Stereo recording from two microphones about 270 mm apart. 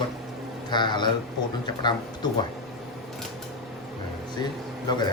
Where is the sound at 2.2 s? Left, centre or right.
Centre.